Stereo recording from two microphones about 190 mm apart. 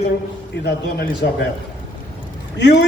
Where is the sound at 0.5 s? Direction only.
60° left (ahead or behind).